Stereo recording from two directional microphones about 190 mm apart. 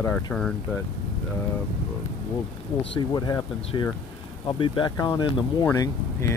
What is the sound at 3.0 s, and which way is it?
Speech, 20° left (ahead or behind).